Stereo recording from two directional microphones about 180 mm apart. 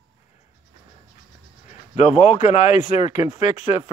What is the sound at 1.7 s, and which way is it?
Speech, 40° left (ahead or behind).